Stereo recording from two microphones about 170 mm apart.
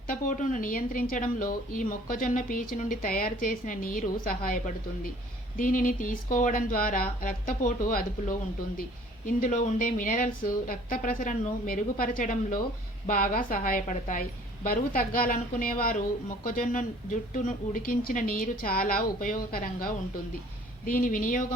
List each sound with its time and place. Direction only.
0.1 s a woman's voice: 50° left (ahead or behind)